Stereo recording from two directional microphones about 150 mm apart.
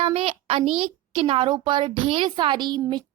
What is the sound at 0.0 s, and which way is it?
A child's voice, 40° right (ahead or behind).